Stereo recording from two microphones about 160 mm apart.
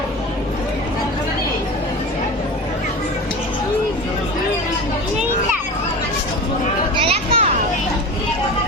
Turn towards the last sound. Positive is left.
turn(degrees=-35)  # may be behind; listen again after turning